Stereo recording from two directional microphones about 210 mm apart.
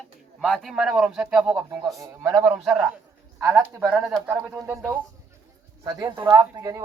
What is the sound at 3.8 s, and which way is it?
Speech, 5° right (ahead or behind).